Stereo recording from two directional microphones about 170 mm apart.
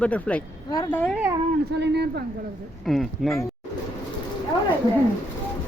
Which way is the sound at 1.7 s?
85° right.